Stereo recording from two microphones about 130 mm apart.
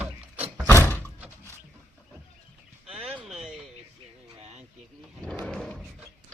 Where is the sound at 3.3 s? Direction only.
Centre (ahead or behind).